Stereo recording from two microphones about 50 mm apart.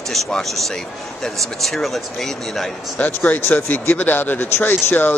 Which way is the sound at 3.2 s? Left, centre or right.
Left.